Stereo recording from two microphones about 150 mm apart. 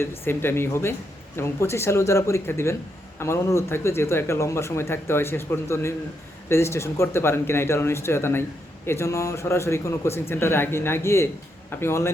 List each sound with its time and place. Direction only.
0.0 s speech: 15° left (ahead or behind)